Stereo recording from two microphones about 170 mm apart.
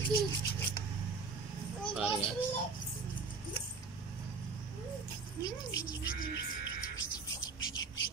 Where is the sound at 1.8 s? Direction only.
5° right (ahead or behind).